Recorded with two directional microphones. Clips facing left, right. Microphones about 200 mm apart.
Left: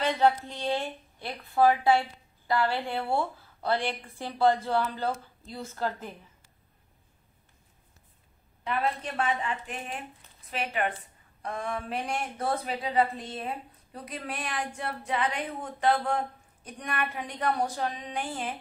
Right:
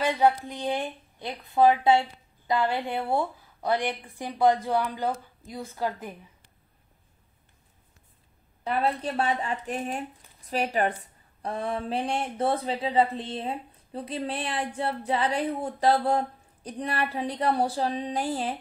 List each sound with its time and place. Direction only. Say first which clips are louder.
0.0 s speech: right 2 dB; 10° right (ahead or behind)
8.6 s speech: right 3 dB; 35° right (ahead or behind)